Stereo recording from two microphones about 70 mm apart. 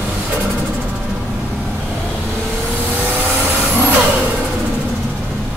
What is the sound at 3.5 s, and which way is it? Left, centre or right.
Vehicle, right.